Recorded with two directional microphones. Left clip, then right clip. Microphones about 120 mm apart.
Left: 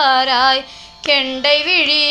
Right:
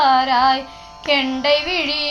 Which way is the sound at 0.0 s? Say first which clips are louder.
Left 1 dB; 40° left (ahead or behind).